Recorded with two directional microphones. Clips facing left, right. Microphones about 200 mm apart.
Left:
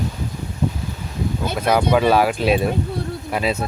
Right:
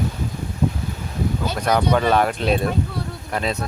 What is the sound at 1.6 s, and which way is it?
Speech, 5° left (ahead or behind).